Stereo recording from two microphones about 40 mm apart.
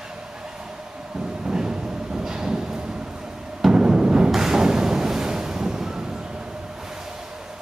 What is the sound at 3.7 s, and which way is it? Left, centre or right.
Timpani, right.